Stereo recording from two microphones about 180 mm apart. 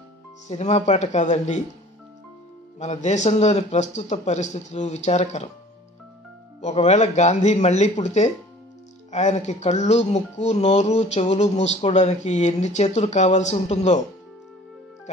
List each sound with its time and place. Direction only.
0.5 s speech: 40° left (ahead or behind)
2.8 s speech: 40° left (ahead or behind)
6.6 s speech: 35° left (ahead or behind)